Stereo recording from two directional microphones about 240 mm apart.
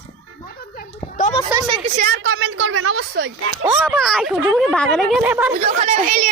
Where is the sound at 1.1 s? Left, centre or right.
Left.